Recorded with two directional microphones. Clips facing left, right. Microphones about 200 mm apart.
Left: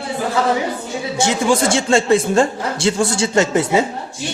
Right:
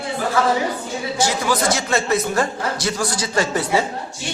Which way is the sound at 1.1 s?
25° left (ahead or behind).